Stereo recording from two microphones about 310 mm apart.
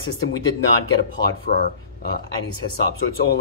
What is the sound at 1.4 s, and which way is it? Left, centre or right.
Speech, left.